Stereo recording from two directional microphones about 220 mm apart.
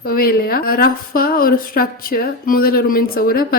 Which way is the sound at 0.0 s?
40° left (ahead or behind).